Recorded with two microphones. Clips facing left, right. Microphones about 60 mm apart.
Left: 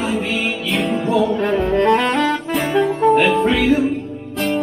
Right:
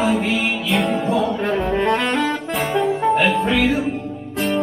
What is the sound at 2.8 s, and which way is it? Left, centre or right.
Music, centre.